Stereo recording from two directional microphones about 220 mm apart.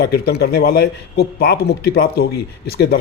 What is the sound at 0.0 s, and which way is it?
A man's voice, 45° left (ahead or behind).